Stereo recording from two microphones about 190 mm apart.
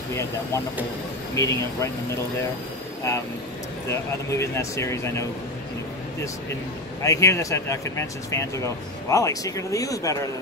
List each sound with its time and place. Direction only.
0.1 s speech: 15° left (ahead or behind)
3.9 s speech: 15° left (ahead or behind)
7.0 s speech: 15° left (ahead or behind)